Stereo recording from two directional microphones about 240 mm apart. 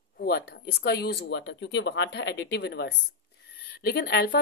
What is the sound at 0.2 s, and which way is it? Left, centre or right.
A woman's voice, left.